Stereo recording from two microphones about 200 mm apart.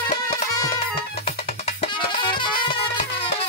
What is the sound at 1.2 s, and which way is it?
Music, 25° left (ahead or behind).